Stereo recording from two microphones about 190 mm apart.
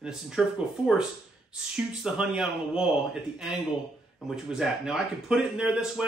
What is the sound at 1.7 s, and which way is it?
Speech, centre (ahead or behind).